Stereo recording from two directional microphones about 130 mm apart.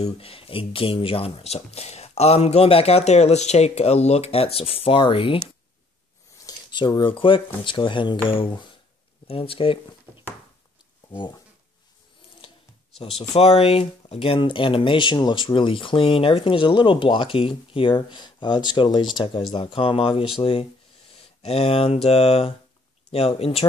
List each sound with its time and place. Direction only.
0.0 s speech: 45° left (ahead or behind)
6.4 s a sound: 35° left (ahead or behind)
7.0 s speech: 40° left (ahead or behind)
11.1 s speech: 35° left (ahead or behind)
13.3 s speech: 55° left (ahead or behind)